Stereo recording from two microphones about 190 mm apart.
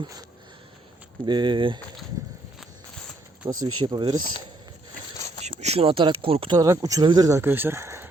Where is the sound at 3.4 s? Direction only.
25° right (ahead or behind).